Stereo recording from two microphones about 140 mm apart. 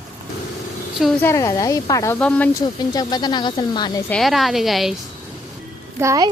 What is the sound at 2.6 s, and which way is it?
Speech, 30° left (ahead or behind).